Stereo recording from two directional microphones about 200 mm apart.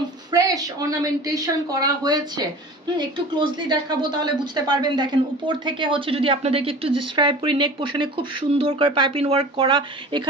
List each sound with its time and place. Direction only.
0.3 s a woman's voice: 15° right (ahead or behind)